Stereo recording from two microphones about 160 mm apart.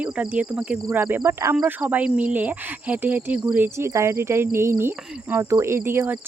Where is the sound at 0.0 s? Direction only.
5° right (ahead or behind).